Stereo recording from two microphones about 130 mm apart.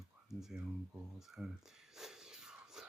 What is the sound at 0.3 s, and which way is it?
Speech, 5° right (ahead or behind).